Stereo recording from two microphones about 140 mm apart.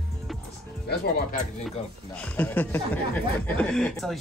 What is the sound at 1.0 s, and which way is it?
Speech, 75° left (ahead or behind).